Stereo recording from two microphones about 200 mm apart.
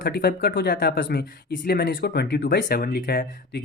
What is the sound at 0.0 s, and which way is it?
Speech, 50° left (ahead or behind).